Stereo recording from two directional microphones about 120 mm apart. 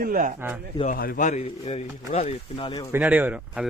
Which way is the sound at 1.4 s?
65° left (ahead or behind).